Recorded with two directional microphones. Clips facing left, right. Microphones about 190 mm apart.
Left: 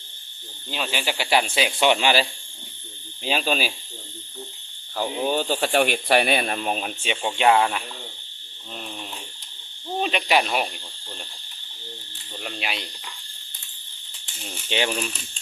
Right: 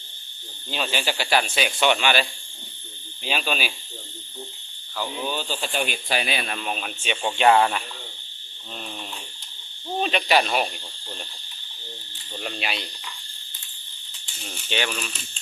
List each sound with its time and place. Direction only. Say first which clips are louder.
0.7 s speech: right 1 dB; 5° left (ahead or behind); by 2.2 s 30° left (ahead or behind)
3.2 s speech: left 3 dB; 30° left (ahead or behind)
4.9 s speech: left 5 dB; 45° left (ahead or behind)
7.2 s speech: right 1 dB; 10° left (ahead or behind)
10.0 s speech: right 1 dB; 10° left (ahead or behind)
12.4 s speech: right 1 dB; 5° left (ahead or behind)
14.7 s speech: left 3 dB; 25° left (ahead or behind)